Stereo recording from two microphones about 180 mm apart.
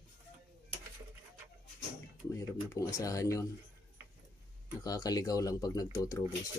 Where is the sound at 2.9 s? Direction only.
20° left (ahead or behind).